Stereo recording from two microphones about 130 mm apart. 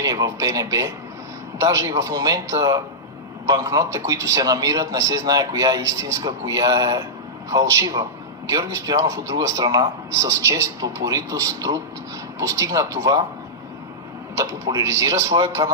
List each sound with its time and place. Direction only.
0.0 s a man's voice: 25° right (ahead or behind)
14.3 s a man's voice: 25° right (ahead or behind)